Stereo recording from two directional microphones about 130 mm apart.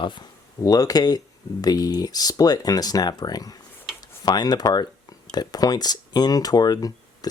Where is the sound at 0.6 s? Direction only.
30° left (ahead or behind).